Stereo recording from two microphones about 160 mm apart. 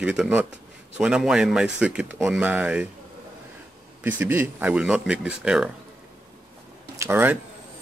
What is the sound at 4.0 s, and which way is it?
Speech, 10° right (ahead or behind).